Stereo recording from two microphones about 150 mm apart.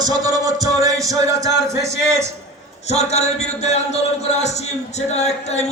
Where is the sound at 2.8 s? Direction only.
45° left (ahead or behind).